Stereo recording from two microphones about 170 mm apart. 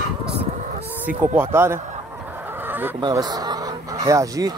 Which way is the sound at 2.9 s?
25° right (ahead or behind).